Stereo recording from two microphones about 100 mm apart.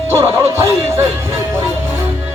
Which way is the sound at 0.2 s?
25° right (ahead or behind).